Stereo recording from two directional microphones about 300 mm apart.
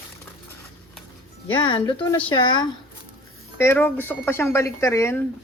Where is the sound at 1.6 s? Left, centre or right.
Centre.